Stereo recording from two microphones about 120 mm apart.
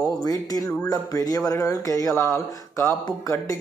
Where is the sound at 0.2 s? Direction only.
30° left (ahead or behind).